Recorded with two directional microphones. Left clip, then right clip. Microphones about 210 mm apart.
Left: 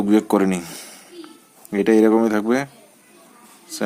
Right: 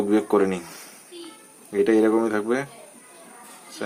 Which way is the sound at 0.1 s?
40° left (ahead or behind).